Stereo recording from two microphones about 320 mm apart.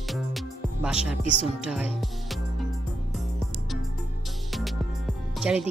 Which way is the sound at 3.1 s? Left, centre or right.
Centre.